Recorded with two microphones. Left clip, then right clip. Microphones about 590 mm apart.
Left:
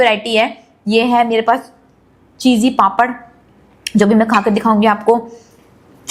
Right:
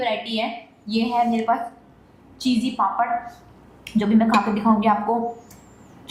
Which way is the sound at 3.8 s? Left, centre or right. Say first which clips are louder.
Left 8 dB; left.